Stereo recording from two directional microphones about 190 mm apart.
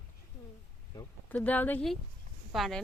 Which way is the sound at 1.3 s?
10° left (ahead or behind).